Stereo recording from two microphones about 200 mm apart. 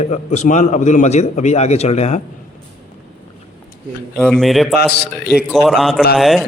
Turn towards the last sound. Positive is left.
turn(degrees=0)  # may be behind; listen again after turning